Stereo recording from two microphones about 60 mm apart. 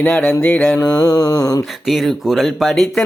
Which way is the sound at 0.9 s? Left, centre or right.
Left.